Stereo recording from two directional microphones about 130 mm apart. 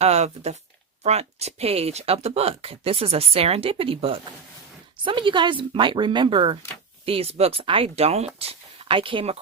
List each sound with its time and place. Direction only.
0.0 s a woman's voice: 55° right (ahead or behind)